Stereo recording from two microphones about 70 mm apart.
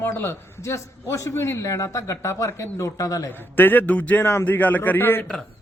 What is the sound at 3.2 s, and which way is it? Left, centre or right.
Speech, left.